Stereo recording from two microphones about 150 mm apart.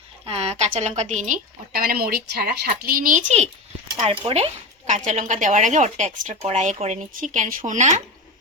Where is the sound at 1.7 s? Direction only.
80° right; by 3.5 s 50° right (ahead or behind).